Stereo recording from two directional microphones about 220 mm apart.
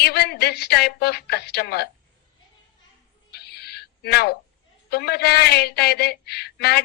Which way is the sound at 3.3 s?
45° left (ahead or behind).